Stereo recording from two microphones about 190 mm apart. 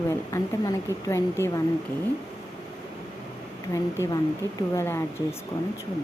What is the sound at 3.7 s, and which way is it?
A woman's voice, 15° left (ahead or behind).